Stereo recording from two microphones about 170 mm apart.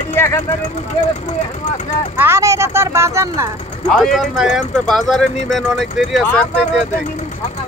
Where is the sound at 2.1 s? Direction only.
15° right (ahead or behind).